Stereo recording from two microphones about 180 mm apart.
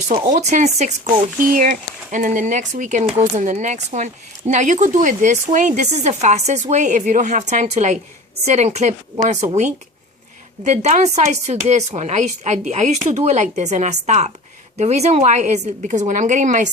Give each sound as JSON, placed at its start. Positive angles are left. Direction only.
{"t": 0.3, "sound": "speech", "side_deg": -40}